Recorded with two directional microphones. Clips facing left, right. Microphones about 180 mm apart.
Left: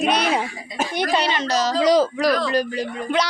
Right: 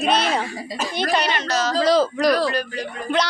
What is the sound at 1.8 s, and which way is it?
Speech, 15° left (ahead or behind).